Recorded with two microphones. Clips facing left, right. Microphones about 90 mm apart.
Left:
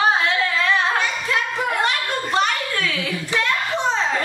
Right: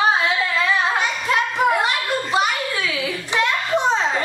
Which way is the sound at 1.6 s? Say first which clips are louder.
Right 3 dB; 5° right (ahead or behind).